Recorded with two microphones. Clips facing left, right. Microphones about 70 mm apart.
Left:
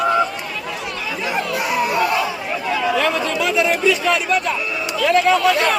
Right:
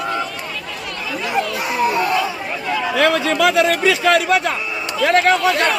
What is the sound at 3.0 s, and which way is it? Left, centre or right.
Chatter, right.